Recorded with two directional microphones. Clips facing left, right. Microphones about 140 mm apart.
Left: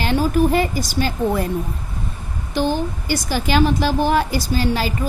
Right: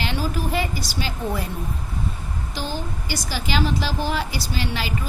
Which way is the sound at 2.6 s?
55° left (ahead or behind).